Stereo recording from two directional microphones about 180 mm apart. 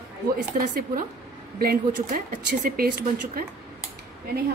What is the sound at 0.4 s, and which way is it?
Speech, 50° right (ahead or behind).